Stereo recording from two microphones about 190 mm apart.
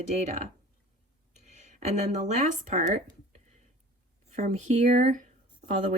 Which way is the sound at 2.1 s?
40° right (ahead or behind).